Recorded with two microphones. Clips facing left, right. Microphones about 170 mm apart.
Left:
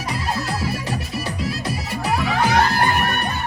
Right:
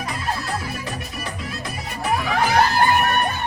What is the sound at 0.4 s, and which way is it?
Music, 35° left (ahead or behind).